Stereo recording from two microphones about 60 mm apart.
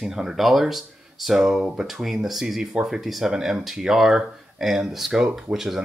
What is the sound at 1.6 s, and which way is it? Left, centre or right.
Speech, centre.